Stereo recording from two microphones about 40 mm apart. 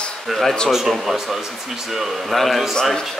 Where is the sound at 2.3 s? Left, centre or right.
Centre.